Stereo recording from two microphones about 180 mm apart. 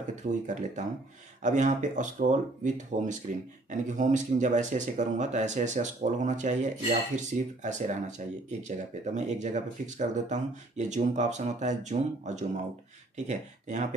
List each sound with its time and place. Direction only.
0.2 s speech: 45° right (ahead or behind)